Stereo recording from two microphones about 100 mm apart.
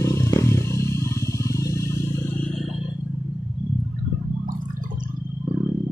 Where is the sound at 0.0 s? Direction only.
30° left (ahead or behind).